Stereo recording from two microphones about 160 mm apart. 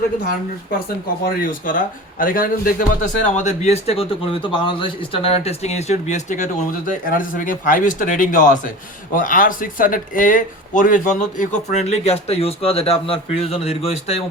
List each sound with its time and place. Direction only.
1.2 s speech: 55° left (ahead or behind); by 14.2 s 40° left (ahead or behind)